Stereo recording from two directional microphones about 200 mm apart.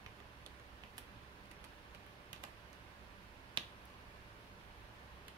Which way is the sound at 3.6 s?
25° right (ahead or behind).